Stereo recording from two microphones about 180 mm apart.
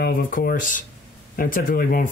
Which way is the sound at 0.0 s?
55° left (ahead or behind).